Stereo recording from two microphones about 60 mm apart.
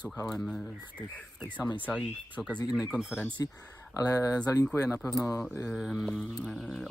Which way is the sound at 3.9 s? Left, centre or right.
Left.